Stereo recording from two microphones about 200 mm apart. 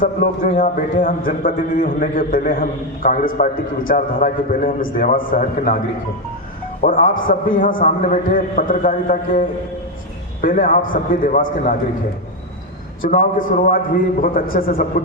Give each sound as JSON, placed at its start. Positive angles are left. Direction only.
{"t": 0.0, "sound": "a man's voice", "side_deg": 45}
{"t": 6.8, "sound": "a man's voice", "side_deg": 40}
{"t": 10.4, "sound": "a man's voice", "side_deg": 45}
{"t": 13.0, "sound": "a man's voice", "side_deg": 40}